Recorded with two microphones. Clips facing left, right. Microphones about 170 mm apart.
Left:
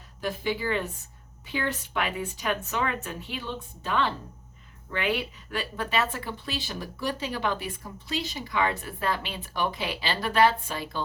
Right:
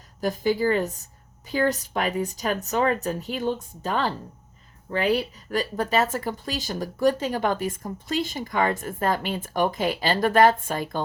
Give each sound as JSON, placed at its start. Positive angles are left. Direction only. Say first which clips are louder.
{"t": 0.2, "sound": "speech", "louder": "right 6 dB", "side_deg": -40}